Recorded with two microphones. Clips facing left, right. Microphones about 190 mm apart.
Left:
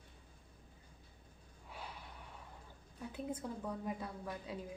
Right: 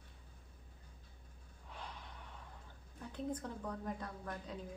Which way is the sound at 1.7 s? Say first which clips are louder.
Left 1 dB; 5° left (ahead or behind).